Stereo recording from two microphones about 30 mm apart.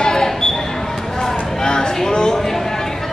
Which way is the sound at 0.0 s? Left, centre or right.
Left.